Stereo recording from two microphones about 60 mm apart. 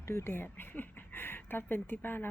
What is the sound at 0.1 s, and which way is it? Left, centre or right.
Speech, left.